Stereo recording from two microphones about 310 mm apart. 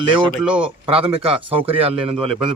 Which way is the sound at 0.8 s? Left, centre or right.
Centre.